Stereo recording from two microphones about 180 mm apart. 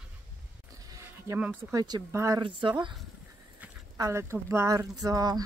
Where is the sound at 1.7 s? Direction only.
20° right (ahead or behind).